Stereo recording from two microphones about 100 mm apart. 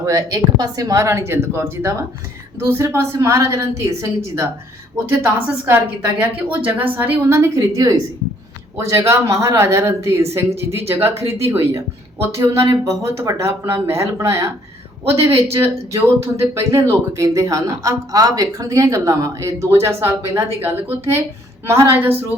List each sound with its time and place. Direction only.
0.0 s a woman's voice: 35° right (ahead or behind)
5.1 s a woman's voice: 20° right (ahead or behind)
15.2 s speech: 75° right (ahead or behind)
15.5 s a woman's voice: 25° right (ahead or behind)